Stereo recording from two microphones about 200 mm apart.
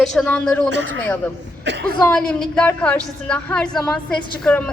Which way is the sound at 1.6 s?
60° right (ahead or behind).